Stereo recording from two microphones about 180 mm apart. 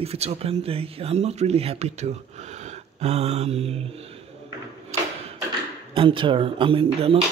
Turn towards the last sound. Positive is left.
turn(degrees=-30)  # may be behind; listen again after turning